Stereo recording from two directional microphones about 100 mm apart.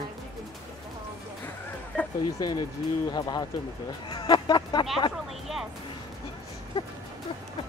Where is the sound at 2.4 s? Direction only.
45° left (ahead or behind).